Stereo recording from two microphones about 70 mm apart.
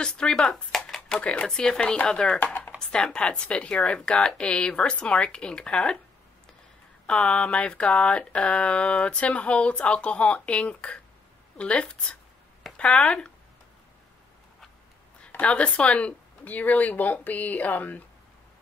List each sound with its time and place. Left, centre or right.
0.0 s speech: centre
2.4 s a sound: left
2.8 s speech: centre
7.1 s speech: centre
15.3 s speech: centre